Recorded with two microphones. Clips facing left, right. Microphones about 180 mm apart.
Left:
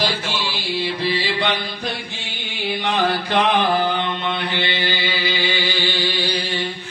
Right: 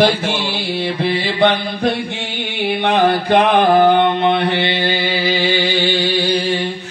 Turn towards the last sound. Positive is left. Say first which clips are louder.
# right 6 dB
turn(degrees=-40)  # may be behind; listen again after turning